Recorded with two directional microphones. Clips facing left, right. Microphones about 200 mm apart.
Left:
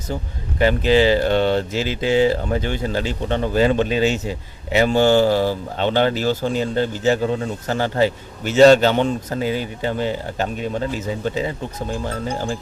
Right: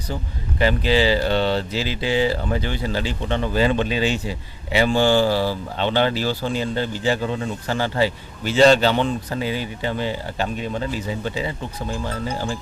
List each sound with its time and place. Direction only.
0.1 s speech: 50° left (ahead or behind)